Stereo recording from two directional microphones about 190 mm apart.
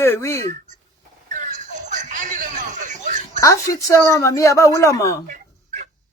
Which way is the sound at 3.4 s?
15° left (ahead or behind).